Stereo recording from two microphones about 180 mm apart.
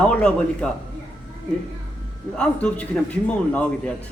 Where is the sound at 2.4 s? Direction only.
5° left (ahead or behind).